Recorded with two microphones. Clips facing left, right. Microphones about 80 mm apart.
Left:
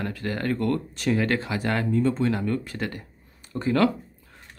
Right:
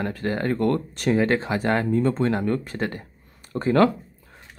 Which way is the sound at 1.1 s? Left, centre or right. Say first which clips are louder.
Right 3 dB; right.